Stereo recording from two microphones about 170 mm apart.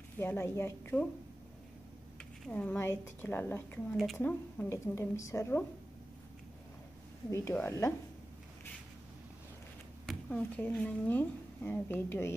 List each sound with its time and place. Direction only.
0.2 s a woman's voice: 15° left (ahead or behind)
2.4 s a woman's voice: 10° left (ahead or behind)
3.9 s a woman's voice: centre (ahead or behind); by 5.7 s 15° left (ahead or behind)
7.2 s a woman's voice: 20° left (ahead or behind)
10.0 s speech: 5° left (ahead or behind)